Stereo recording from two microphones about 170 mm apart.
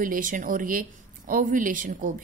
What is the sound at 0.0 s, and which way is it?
Speech, 55° right (ahead or behind).